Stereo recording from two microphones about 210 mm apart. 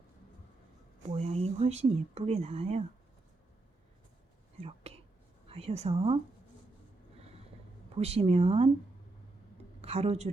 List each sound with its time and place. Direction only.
1.0 s speech: 30° right (ahead or behind)
4.6 s speech: 30° right (ahead or behind)
7.2 s vehicle: 30° right (ahead or behind)
7.9 s speech: 30° right (ahead or behind)
9.8 s a woman's voice: 30° right (ahead or behind)